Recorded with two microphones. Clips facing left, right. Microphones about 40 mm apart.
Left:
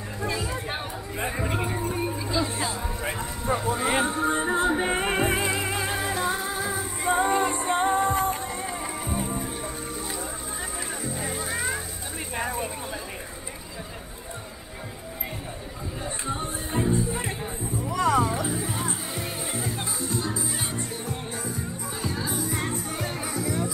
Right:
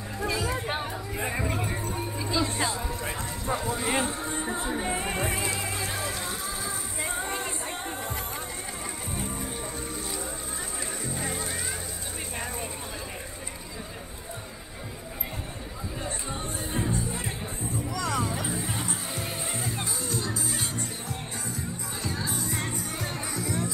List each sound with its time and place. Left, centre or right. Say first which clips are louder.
0.2 s music: right 1 dB; centre
1.4 s music: left 3 dB; centre
2.1 s music: left 1 dB; centre
4.3 s music: left 7 dB; left
5.2 s music: left 5 dB; centre
7.7 s music: left 12 dB; left
9.1 s music: left 5 dB; centre
11.1 s music: left 1 dB; centre
11.5 s music: left 6 dB; centre
12.4 s a sound: left 7 dB; centre
16.8 s music: left 6 dB; left; by 18.9 s centre
19.1 s music: left 2 dB; centre